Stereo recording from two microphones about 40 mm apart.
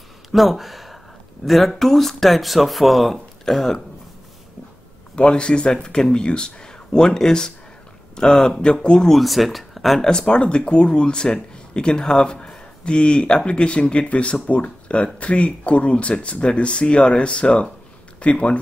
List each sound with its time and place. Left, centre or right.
0.3 s speech: centre
5.1 s speech: left
9.0 s speech: centre
10.0 s speech: centre